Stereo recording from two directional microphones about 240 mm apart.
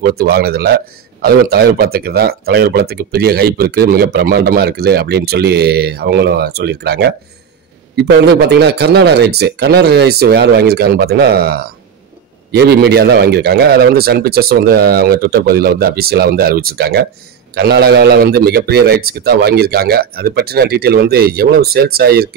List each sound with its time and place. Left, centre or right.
0.0 s a man's voice: right